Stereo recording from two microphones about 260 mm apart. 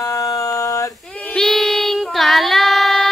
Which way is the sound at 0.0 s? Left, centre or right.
Centre.